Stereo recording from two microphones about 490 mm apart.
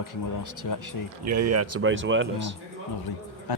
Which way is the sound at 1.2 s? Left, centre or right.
Right.